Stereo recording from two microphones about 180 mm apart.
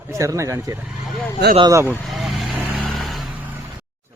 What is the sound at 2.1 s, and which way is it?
Vehicle, centre (ahead or behind).